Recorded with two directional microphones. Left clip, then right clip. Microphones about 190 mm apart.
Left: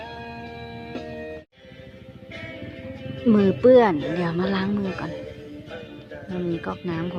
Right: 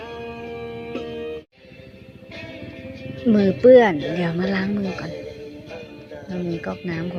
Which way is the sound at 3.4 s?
15° right (ahead or behind).